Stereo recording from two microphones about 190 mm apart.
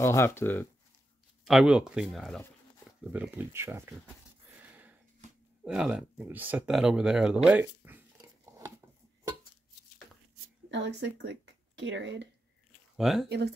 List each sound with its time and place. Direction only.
0.0 s speech: 15° left (ahead or behind)
1.4 s speech: 5° right (ahead or behind)
4.6 s a sound: 10° right (ahead or behind)
5.6 s speech: 5° right (ahead or behind)
10.7 s speech: 70° right (ahead or behind)
12.9 s speech: centre (ahead or behind)